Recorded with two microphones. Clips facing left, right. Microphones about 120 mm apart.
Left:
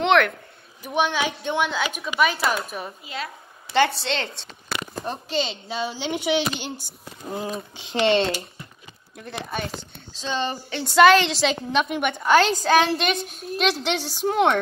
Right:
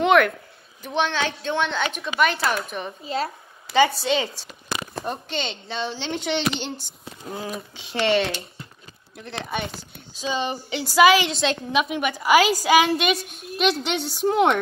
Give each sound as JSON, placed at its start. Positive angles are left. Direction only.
{"t": 0.0, "sound": "speech", "side_deg": 0}
{"t": 0.8, "sound": "a woman's voice", "side_deg": 10}
{"t": 3.0, "sound": "speech", "side_deg": -35}
{"t": 3.7, "sound": "a woman's voice", "side_deg": 0}
{"t": 7.8, "sound": "speech", "side_deg": 20}
{"t": 9.2, "sound": "a woman's voice", "side_deg": 0}
{"t": 10.1, "sound": "a woman's voice", "side_deg": -10}
{"t": 13.3, "sound": "a child's voice", "side_deg": 35}
{"t": 13.6, "sound": "a woman's voice", "side_deg": 0}